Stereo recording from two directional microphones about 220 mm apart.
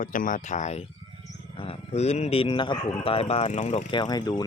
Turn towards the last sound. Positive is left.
turn(degrees=20)  # may be behind; listen again after turning